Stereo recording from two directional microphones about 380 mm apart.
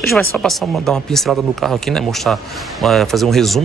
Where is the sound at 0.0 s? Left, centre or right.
Centre.